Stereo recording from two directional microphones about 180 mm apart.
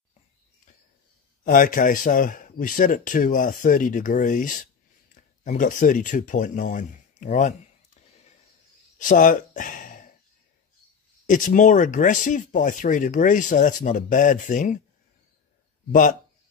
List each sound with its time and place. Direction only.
1.4 s speech: 50° left (ahead or behind)
8.9 s a sound: 45° left (ahead or behind)
11.2 s speech: 45° left (ahead or behind)
15.9 s speech: 45° left (ahead or behind)